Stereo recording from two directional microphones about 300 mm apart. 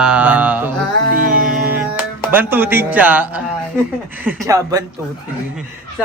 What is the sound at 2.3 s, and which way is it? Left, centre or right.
A woman's voice, centre.